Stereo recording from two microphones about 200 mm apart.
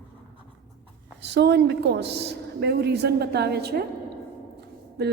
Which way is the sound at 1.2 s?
60° right (ahead or behind).